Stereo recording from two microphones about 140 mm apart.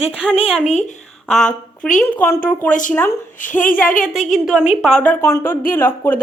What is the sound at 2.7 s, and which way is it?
Speech, 65° left (ahead or behind).